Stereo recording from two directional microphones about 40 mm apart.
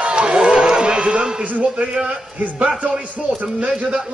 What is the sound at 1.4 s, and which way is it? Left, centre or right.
Speech, right.